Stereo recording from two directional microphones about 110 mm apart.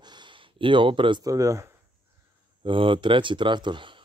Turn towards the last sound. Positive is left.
turn(degrees=-45)  # may be behind; listen again after turning